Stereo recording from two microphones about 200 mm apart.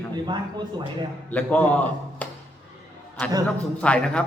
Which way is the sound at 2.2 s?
5° left (ahead or behind).